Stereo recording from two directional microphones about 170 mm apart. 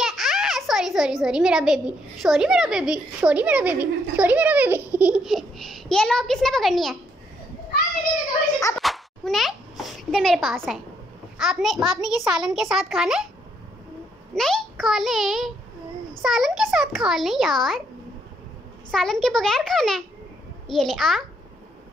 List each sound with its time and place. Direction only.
0.0 s a child's voice: centre (ahead or behind)
8.5 s cat: 20° left (ahead or behind)
8.8 s a sound: centre (ahead or behind)
11.3 s a child's voice: centre (ahead or behind)
14.3 s a child's voice: centre (ahead or behind)
18.9 s a child's voice: 5° left (ahead or behind)